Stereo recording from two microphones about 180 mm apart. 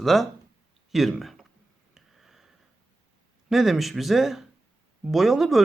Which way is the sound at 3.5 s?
Centre (ahead or behind).